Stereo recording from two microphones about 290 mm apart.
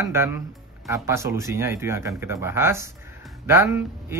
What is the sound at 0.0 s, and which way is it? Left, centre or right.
Speech, centre.